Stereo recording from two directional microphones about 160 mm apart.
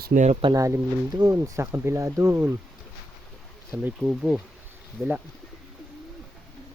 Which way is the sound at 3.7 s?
10° right (ahead or behind).